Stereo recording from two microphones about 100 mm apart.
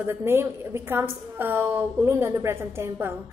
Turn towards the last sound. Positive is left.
turn(degrees=-25)  # may be behind; listen again after turning